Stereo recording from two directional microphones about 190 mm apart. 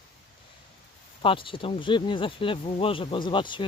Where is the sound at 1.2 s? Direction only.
25° left (ahead or behind).